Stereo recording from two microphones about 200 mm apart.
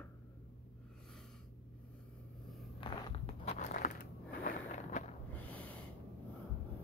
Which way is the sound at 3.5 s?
40° left (ahead or behind).